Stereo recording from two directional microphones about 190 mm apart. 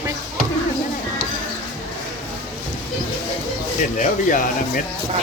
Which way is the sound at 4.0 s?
45° left (ahead or behind).